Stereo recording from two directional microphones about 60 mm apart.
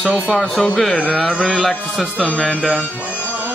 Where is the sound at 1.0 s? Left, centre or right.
Centre.